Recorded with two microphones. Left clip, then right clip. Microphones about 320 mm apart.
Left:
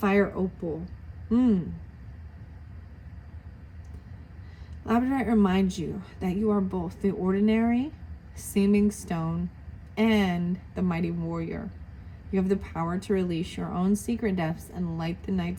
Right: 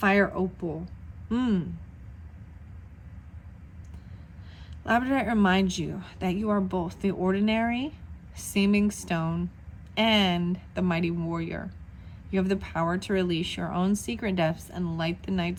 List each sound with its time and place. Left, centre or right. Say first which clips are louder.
0.0 s speech: right 1 dB; right
4.9 s speech: right 1 dB; right